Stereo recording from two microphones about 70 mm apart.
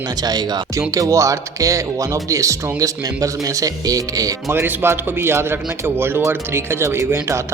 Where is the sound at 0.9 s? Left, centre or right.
Right.